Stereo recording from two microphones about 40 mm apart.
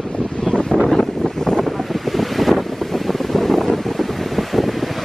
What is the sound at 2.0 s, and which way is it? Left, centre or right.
Wind noise, centre.